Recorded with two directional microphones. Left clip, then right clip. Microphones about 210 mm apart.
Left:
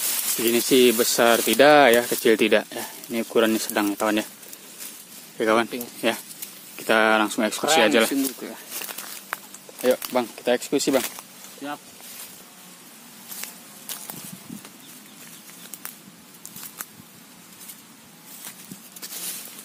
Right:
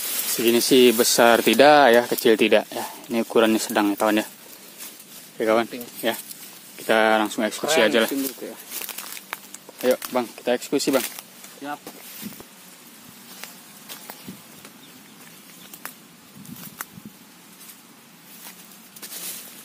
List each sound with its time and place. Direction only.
0.5 s speech: 10° right (ahead or behind)
5.4 s speech: 10° left (ahead or behind)
8.4 s speech: 30° left (ahead or behind)
8.7 s a sound: 10° right (ahead or behind)
9.8 s speech: centre (ahead or behind)